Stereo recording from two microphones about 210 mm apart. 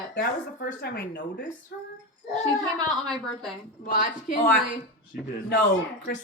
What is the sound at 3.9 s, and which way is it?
Speech, 40° left (ahead or behind).